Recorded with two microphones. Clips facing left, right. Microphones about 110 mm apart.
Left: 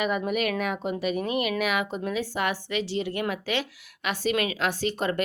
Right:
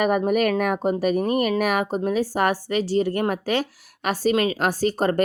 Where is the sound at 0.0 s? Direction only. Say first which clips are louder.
Right 6 dB; 45° right (ahead or behind).